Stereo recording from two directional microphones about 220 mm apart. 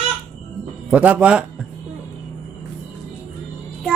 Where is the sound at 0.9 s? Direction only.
5° right (ahead or behind).